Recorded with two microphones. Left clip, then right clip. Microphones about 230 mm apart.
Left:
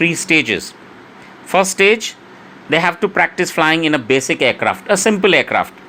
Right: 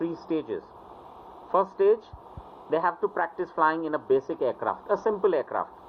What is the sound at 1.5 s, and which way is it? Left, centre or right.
A man's voice, left.